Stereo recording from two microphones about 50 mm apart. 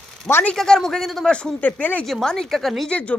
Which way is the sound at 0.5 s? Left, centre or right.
Centre.